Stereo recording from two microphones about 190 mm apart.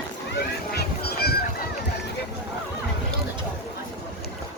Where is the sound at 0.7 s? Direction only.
60° left (ahead or behind).